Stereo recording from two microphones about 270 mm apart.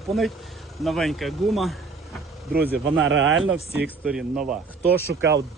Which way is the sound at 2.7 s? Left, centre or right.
Right.